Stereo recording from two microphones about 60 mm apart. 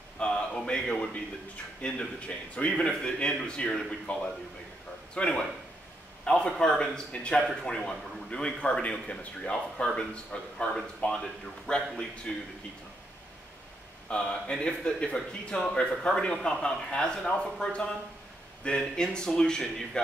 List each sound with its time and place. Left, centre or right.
0.2 s a man's voice: centre
1.8 s a man's voice: left
14.0 s speech: centre